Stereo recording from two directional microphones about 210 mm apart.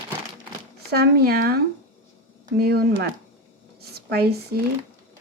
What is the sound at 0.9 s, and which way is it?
Speech, 50° right (ahead or behind).